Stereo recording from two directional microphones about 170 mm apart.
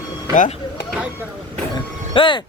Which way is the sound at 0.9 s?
5° right (ahead or behind).